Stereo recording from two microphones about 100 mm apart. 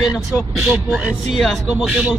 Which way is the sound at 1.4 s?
Centre (ahead or behind).